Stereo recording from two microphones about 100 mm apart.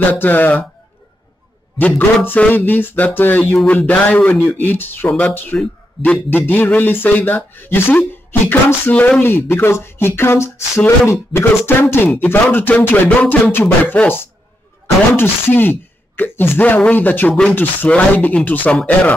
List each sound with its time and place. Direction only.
0.1 s speech: 20° left (ahead or behind)
1.8 s a man's voice: 15° left (ahead or behind)